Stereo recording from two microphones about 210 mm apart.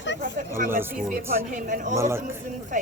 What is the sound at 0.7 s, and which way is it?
Speech, 10° right (ahead or behind).